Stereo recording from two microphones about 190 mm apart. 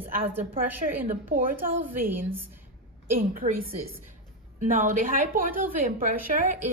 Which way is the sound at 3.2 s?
50° right (ahead or behind).